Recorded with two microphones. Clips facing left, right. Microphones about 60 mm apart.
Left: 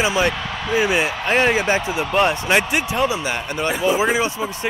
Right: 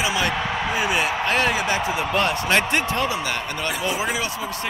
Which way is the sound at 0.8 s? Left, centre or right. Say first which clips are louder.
Left 3 dB; left.